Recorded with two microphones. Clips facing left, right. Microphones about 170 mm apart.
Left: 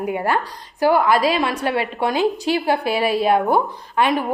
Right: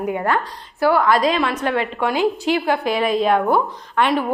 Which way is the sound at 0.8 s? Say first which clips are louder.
Even; 15° left (ahead or behind).